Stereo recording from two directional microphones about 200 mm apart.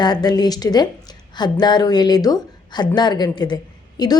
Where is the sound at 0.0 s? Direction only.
20° left (ahead or behind).